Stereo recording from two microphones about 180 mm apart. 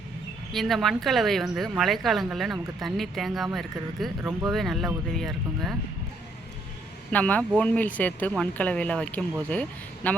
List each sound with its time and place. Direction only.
0.5 s a woman's voice: centre (ahead or behind)
7.1 s speech: 10° left (ahead or behind)